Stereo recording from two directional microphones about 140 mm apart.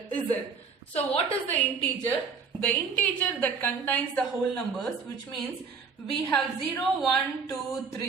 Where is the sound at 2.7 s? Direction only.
10° left (ahead or behind).